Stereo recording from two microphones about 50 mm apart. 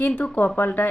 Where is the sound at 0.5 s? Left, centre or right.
Left.